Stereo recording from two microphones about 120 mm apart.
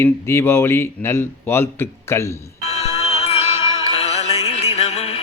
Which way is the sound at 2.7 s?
65° left (ahead or behind).